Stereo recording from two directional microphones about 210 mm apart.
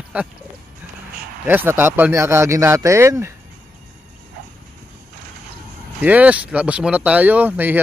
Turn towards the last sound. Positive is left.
turn(degrees=-10)  # may be behind; listen again after turning